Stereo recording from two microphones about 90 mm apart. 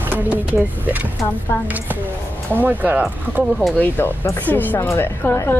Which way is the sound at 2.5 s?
20° right (ahead or behind).